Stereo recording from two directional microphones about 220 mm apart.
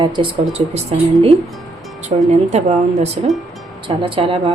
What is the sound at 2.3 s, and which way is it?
A woman's voice, 30° right (ahead or behind).